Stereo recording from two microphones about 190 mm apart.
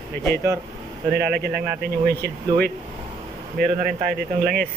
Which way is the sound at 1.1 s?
55° right (ahead or behind).